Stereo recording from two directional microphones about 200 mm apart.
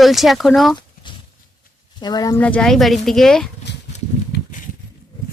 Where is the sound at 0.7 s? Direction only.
25° left (ahead or behind).